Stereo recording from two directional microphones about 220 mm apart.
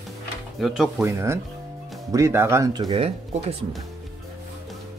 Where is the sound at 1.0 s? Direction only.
10° right (ahead or behind).